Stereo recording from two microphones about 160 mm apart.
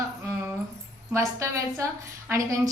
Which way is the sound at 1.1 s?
20° right (ahead or behind).